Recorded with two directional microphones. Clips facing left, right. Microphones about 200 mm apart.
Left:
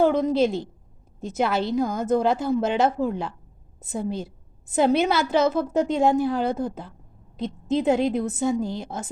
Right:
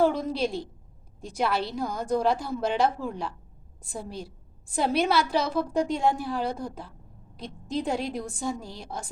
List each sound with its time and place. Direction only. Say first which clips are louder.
0.3 s a woman's voice: left 7 dB; 25° left (ahead or behind)